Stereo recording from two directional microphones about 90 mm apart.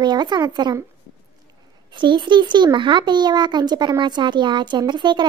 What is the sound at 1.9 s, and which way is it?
A child's voice, 60° right (ahead or behind).